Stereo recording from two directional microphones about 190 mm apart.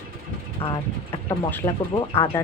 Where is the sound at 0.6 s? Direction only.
30° left (ahead or behind).